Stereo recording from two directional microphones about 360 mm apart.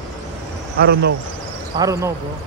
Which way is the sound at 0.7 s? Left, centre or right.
Right.